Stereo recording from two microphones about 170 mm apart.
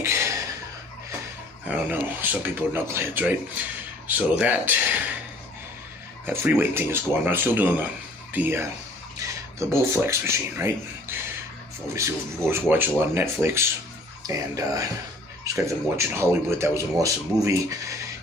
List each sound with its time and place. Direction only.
0.0 s a sound: 15° right (ahead or behind)
1.6 s speech: 10° right (ahead or behind)
6.2 s speech: 10° right (ahead or behind)
11.9 s speech: 15° right (ahead or behind)